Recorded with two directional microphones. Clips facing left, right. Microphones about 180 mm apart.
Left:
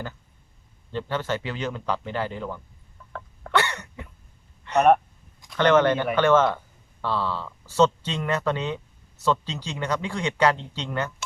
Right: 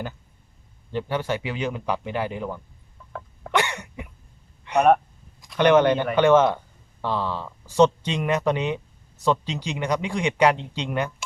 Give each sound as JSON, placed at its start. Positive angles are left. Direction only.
{"t": 0.9, "sound": "speech", "side_deg": -15}
{"t": 3.1, "sound": "sneeze", "side_deg": -10}
{"t": 4.6, "sound": "a sound", "side_deg": -10}
{"t": 5.5, "sound": "speech", "side_deg": -15}